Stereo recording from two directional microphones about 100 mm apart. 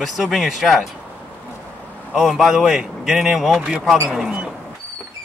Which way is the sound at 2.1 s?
5° right (ahead or behind).